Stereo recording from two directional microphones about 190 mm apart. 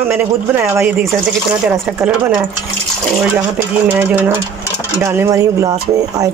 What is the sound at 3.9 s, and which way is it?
Speech, 10° right (ahead or behind).